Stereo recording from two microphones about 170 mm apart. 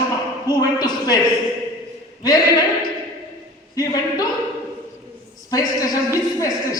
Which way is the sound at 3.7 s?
20° left (ahead or behind).